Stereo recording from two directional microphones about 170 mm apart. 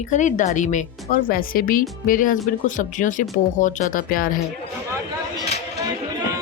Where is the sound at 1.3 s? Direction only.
55° left (ahead or behind).